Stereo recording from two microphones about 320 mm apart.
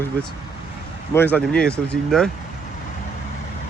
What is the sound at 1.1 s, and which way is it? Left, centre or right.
Speech, centre.